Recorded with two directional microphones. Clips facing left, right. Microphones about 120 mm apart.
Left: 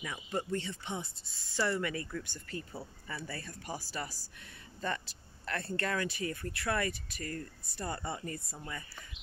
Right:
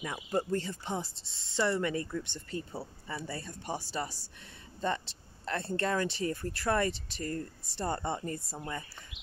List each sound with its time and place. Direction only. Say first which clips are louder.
0.0 s speech: right 4 dB; 35° right (ahead or behind)